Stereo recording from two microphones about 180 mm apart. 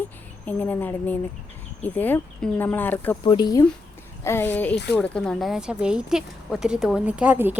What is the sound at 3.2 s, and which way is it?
Speech, 25° left (ahead or behind).